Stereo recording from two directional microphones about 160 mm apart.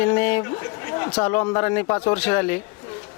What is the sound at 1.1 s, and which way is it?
Speech, 10° left (ahead or behind).